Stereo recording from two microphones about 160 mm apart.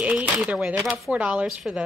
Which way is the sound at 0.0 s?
5° right (ahead or behind).